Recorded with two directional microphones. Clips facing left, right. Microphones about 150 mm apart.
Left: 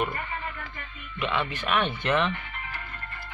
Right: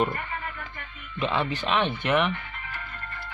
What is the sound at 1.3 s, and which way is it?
Speech, 30° right (ahead or behind).